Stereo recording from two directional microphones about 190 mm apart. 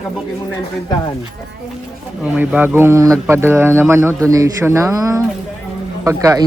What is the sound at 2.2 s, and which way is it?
A woman's voice, 5° right (ahead or behind).